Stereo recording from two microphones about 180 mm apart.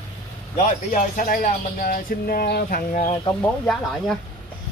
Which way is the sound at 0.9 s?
50° left (ahead or behind).